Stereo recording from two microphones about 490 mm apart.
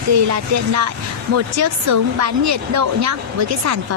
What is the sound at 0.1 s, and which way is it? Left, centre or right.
Speech, right.